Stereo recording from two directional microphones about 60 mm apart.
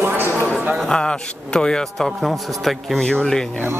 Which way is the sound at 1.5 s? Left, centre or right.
Centre.